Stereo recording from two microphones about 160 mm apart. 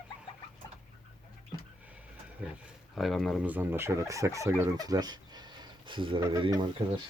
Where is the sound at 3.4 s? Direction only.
10° right (ahead or behind); by 7.0 s 40° right (ahead or behind).